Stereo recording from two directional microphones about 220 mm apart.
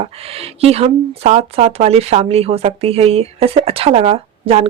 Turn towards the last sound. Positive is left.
turn(degrees=-25)  # may be behind; listen again after turning